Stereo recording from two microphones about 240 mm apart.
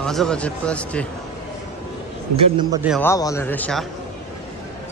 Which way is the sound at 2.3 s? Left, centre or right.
Centre.